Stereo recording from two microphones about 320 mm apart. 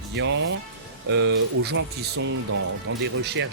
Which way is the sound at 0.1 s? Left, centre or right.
Right.